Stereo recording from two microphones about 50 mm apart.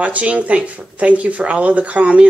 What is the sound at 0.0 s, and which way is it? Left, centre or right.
Speech, right.